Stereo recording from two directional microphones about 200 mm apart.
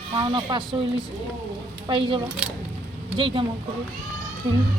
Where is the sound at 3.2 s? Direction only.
25° right (ahead or behind).